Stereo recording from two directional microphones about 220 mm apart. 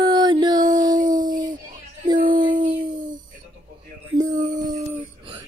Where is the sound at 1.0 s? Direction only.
35° right (ahead or behind).